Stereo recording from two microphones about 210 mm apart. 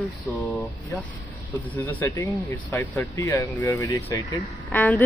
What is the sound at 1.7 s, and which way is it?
Speech, 10° left (ahead or behind).